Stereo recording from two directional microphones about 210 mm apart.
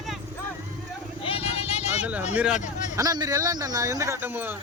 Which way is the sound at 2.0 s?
5° right (ahead or behind).